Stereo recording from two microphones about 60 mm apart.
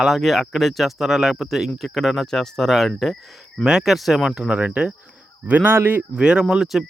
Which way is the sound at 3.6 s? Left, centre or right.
Centre.